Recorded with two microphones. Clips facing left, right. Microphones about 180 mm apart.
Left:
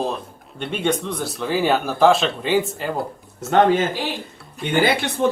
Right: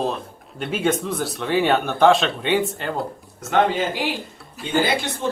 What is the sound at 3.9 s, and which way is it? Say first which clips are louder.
Speech: right 1 dB; 15° right (ahead or behind).